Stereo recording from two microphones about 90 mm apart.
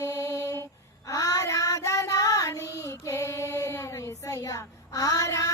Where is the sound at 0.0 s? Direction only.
35° left (ahead or behind).